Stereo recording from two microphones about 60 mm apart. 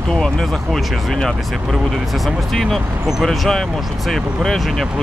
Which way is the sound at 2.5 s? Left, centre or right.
Centre.